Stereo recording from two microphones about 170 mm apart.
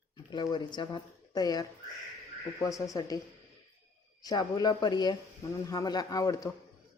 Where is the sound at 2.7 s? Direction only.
20° left (ahead or behind).